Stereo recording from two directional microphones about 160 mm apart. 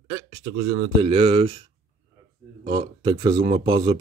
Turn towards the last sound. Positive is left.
turn(degrees=-30)  # may be behind; listen again after turning